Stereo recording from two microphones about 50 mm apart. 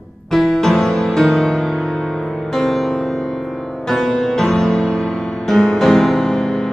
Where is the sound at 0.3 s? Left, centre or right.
Centre.